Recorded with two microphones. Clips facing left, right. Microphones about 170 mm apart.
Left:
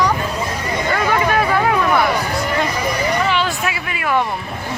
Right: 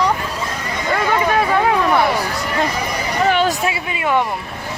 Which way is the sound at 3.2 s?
50° right (ahead or behind).